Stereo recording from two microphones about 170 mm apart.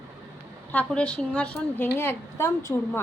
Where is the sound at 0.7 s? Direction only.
10° left (ahead or behind).